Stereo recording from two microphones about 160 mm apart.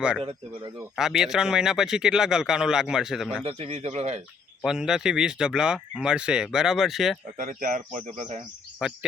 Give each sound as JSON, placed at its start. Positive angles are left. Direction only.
{"t": 0.2, "sound": "speech", "side_deg": -35}
{"t": 0.9, "sound": "speech", "side_deg": -5}
{"t": 3.4, "sound": "speech", "side_deg": -40}
{"t": 4.6, "sound": "speech", "side_deg": -5}
{"t": 7.3, "sound": "speech", "side_deg": -55}
{"t": 8.8, "sound": "speech", "side_deg": -5}